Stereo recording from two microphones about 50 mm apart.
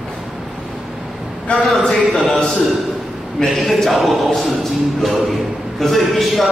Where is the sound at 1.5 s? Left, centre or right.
Left.